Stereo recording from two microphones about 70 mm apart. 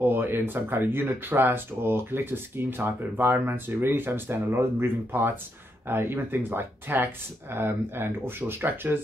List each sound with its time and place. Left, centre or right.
0.0 s speech: right